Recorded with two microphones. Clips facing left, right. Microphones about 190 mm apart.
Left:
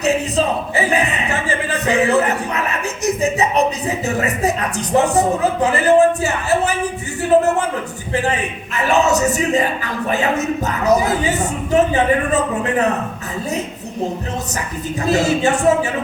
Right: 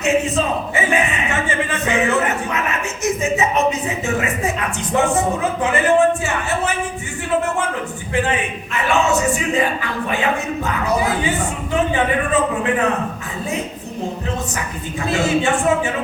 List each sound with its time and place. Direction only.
0.0 s speech: 35° left (ahead or behind)
8.7 s speech: 40° left (ahead or behind)
15.0 s speech: 40° left (ahead or behind)